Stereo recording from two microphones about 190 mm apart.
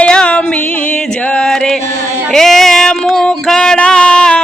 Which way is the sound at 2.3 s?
Centre (ahead or behind).